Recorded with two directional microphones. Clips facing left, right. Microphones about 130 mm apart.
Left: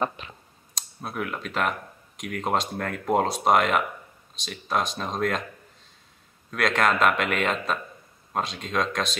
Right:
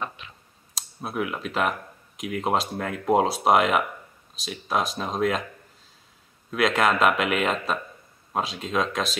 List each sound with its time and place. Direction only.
0.2 s speech: 40° left (ahead or behind)
0.7 s speech: 5° right (ahead or behind)
6.5 s speech: 5° right (ahead or behind)